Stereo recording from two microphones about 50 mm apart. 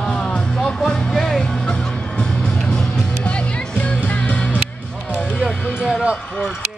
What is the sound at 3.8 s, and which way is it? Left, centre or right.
Music, left.